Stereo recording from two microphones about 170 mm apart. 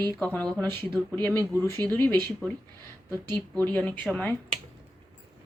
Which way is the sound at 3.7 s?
10° left (ahead or behind).